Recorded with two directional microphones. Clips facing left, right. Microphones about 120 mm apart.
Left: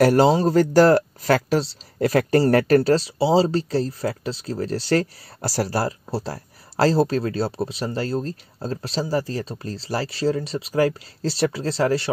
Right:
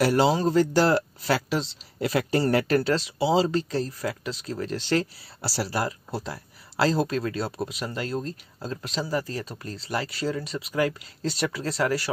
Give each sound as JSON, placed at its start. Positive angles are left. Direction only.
{"t": 0.0, "sound": "speech", "side_deg": 45}
{"t": 0.6, "sound": "speech", "side_deg": 45}